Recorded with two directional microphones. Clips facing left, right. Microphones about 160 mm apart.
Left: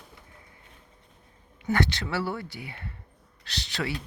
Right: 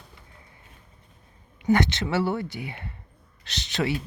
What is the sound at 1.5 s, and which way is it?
Speech, 20° right (ahead or behind).